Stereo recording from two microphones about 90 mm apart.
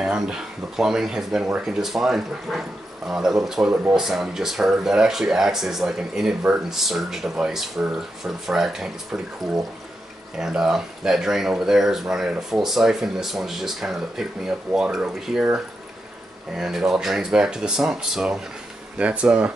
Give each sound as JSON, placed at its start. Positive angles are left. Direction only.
{"t": 0.0, "sound": "speech", "side_deg": -5}
{"t": 16.5, "sound": "speech", "side_deg": -5}